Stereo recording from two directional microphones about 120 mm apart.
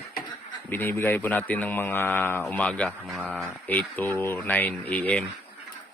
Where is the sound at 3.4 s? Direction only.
15° left (ahead or behind).